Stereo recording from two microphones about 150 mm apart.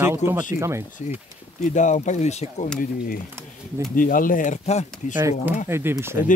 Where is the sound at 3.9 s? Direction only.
65° left (ahead or behind); by 5.1 s 50° left (ahead or behind).